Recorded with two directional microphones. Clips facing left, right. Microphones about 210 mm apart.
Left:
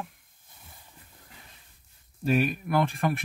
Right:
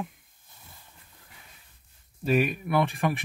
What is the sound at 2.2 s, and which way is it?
Speech, centre (ahead or behind).